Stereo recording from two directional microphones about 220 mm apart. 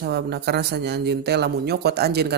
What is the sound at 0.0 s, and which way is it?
Speech, 50° right (ahead or behind).